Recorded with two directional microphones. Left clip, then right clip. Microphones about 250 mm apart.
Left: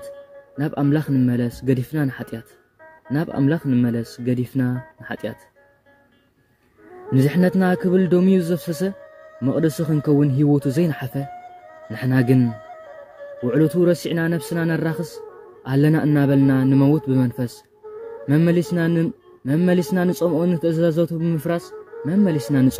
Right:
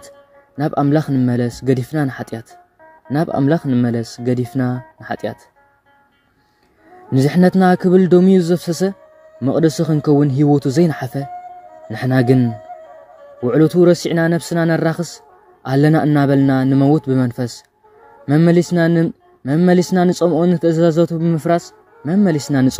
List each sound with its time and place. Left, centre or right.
0.6 s a man's voice: centre
7.1 s a man's voice: centre
13.5 s a man's voice: centre